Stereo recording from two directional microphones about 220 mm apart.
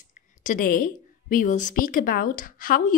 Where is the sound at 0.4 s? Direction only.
35° left (ahead or behind).